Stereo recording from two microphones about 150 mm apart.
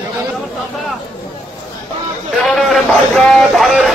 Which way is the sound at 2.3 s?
Centre (ahead or behind).